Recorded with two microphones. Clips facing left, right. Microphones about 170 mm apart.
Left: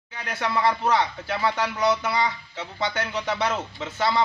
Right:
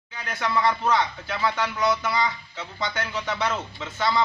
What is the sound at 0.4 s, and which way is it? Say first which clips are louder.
Speech: even; 30° left (ahead or behind).